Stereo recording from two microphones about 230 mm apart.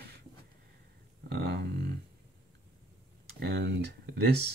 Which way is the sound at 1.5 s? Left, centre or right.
Right.